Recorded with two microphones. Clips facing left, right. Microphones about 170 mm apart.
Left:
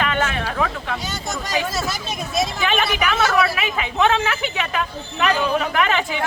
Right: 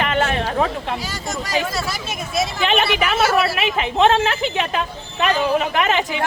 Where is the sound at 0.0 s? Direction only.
30° right (ahead or behind).